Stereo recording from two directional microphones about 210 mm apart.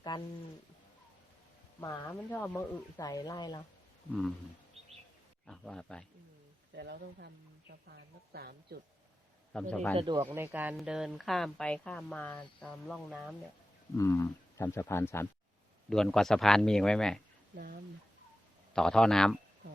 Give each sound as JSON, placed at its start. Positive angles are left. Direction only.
{"t": 1.8, "sound": "speech", "side_deg": 15}
{"t": 5.5, "sound": "speech", "side_deg": 5}
{"t": 6.7, "sound": "speech", "side_deg": -50}
{"t": 9.5, "sound": "speech", "side_deg": 5}
{"t": 10.0, "sound": "speech", "side_deg": -20}
{"t": 10.2, "sound": "speech", "side_deg": -10}
{"t": 13.9, "sound": "speech", "side_deg": 15}
{"t": 18.7, "sound": "speech", "side_deg": 5}